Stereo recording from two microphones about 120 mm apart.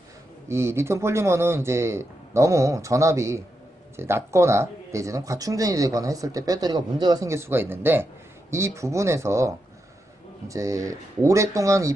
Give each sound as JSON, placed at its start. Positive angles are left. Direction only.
{"t": 0.4, "sound": "speech", "side_deg": -25}
{"t": 10.5, "sound": "speech", "side_deg": -25}